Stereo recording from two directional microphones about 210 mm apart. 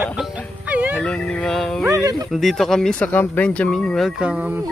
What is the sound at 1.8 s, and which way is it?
Speech, 15° right (ahead or behind).